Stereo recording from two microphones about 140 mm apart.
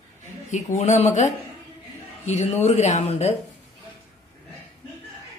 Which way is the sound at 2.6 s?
55° left (ahead or behind).